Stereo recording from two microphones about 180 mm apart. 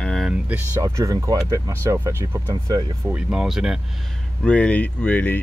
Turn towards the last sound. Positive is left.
turn(degrees=10)  # may be behind; listen again after turning